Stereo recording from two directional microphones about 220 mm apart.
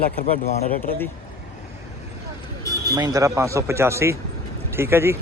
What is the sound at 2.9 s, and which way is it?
Speech, 15° right (ahead or behind).